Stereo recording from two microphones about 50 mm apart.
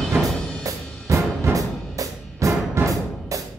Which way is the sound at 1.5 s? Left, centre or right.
Right.